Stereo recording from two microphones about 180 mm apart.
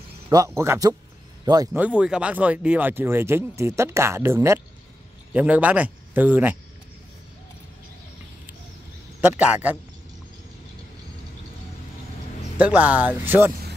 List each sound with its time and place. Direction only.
0.3 s speech: 20° right (ahead or behind)
1.7 s speech: 5° right (ahead or behind)
9.3 s speech: 10° right (ahead or behind)
12.5 s speech: 10° right (ahead or behind)
13.5 s vehicle: 55° right (ahead or behind)